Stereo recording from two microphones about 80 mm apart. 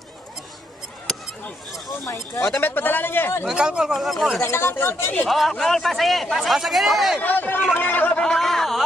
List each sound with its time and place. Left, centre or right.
2.6 s speech: left
3.4 s a man's voice: centre
4.4 s speech: left
5.3 s a man's voice: centre
7.2 s speech: left
7.7 s a sound: left
8.2 s a sound: centre